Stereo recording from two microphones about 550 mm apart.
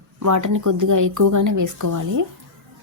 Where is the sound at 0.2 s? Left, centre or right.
Right.